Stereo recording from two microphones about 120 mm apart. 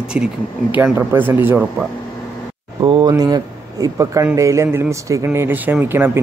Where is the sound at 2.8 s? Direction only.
35° right (ahead or behind).